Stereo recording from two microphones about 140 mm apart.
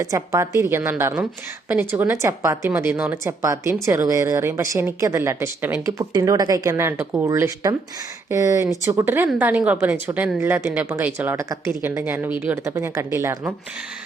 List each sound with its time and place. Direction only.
0.0 s a woman's voice: 25° right (ahead or behind)